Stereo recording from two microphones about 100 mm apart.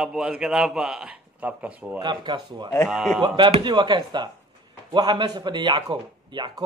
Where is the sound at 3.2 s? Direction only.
50° right (ahead or behind).